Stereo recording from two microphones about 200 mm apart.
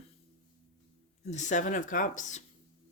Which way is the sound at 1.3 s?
35° left (ahead or behind).